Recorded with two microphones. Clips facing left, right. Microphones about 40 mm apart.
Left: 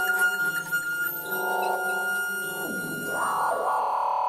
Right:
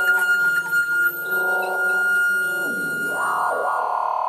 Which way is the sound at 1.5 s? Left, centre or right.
Centre.